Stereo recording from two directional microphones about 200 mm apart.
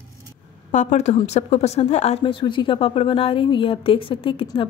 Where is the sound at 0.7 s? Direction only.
35° left (ahead or behind).